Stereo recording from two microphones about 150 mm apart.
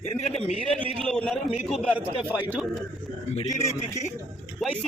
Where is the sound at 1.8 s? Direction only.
10° right (ahead or behind).